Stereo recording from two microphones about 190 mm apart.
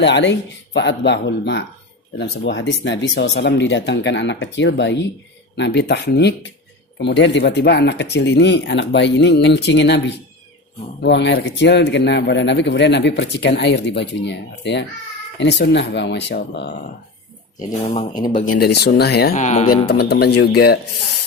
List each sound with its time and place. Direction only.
0.0 s a man's voice: 70° left (ahead or behind)
11.0 s a man's voice: 65° left (ahead or behind)
17.8 s speech: 30° left (ahead or behind)
18.4 s speech: 50° left (ahead or behind)
19.4 s speech: 35° left (ahead or behind)
19.6 s speech: 55° left (ahead or behind)